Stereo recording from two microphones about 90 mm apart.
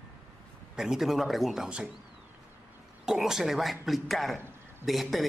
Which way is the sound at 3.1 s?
5° right (ahead or behind).